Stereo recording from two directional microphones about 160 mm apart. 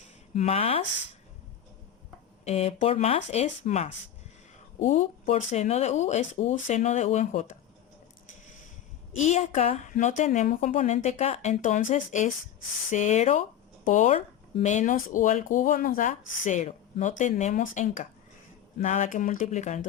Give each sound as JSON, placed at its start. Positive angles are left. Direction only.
{"t": 0.3, "sound": "speech", "side_deg": 40}
{"t": 2.4, "sound": "speech", "side_deg": 40}
{"t": 9.1, "sound": "speech", "side_deg": 45}